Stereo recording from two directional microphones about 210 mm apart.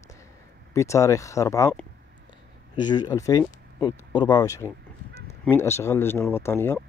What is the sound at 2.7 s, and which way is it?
Speech, 20° left (ahead or behind).